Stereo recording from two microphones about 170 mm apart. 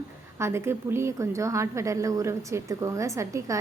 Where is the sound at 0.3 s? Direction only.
15° right (ahead or behind).